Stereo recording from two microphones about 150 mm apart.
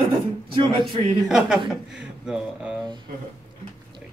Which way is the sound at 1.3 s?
Centre (ahead or behind).